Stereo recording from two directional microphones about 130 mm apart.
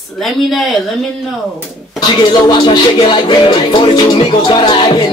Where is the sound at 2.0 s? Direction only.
35° left (ahead or behind).